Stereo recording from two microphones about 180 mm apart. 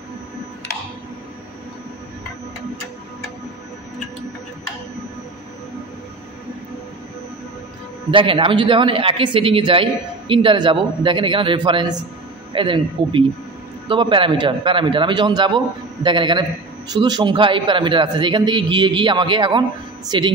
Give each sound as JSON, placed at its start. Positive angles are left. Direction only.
{"t": 8.1, "sound": "a man's voice", "side_deg": -30}